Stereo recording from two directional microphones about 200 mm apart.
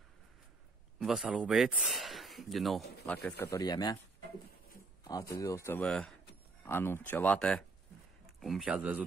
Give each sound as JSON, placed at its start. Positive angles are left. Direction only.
{"t": 0.9, "sound": "speech", "side_deg": -5}
{"t": 3.4, "sound": "speech", "side_deg": 20}
{"t": 5.0, "sound": "speech", "side_deg": 15}